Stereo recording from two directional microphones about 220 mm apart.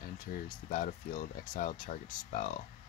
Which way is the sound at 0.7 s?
35° left (ahead or behind).